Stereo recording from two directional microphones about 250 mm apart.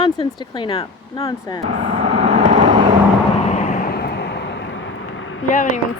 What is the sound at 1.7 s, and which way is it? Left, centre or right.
Vehicle, right.